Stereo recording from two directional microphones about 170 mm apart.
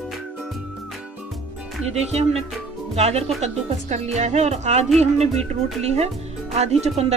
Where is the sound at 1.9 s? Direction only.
40° right (ahead or behind).